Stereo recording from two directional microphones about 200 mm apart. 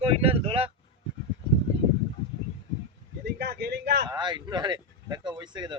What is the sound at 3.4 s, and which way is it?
Speech, 55° right (ahead or behind).